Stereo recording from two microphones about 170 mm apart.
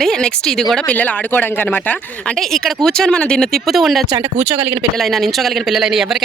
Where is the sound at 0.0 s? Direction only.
5° left (ahead or behind).